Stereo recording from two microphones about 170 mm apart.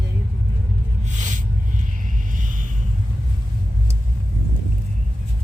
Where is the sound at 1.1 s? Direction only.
45° right (ahead or behind).